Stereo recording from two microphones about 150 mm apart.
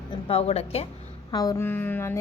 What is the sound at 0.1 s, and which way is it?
Speech, 40° left (ahead or behind).